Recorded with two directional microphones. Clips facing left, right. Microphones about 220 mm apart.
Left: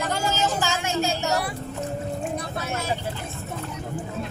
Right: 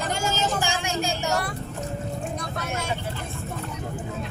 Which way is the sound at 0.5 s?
15° right (ahead or behind).